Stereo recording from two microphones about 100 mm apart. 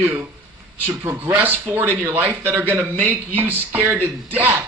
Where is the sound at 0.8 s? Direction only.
20° right (ahead or behind).